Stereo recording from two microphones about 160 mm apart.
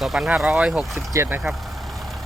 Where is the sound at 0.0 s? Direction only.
5° right (ahead or behind).